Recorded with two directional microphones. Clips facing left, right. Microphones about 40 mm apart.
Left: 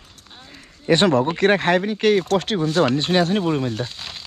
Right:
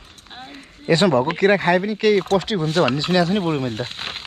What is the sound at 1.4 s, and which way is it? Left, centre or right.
Speech, left.